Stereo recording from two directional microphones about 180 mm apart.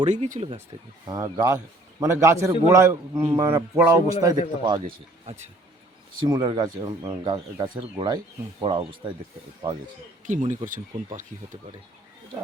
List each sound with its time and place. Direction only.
0.0 s speech: 40° right (ahead or behind)
1.0 s a man's voice: 20° right (ahead or behind)
6.2 s speech: 25° right (ahead or behind)
10.2 s speech: 45° right (ahead or behind)